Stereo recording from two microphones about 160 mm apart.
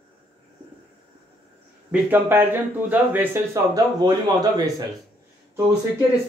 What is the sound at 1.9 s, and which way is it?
Speech, 15° right (ahead or behind).